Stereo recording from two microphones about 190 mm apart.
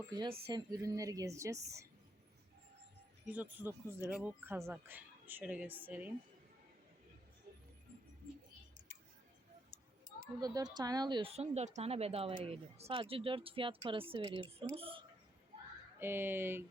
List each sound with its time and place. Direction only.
0.1 s speech: 25° right (ahead or behind)
3.2 s speech: 10° right (ahead or behind)
10.4 s speech: 20° right (ahead or behind)
16.0 s speech: 10° right (ahead or behind)